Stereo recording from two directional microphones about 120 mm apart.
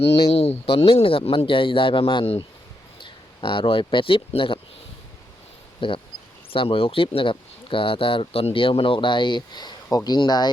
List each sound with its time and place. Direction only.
0.1 s speech: 60° left (ahead or behind)
5.8 s speech: 45° left (ahead or behind)